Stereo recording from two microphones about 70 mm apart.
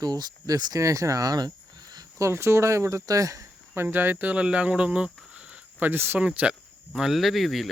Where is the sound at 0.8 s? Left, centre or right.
Right.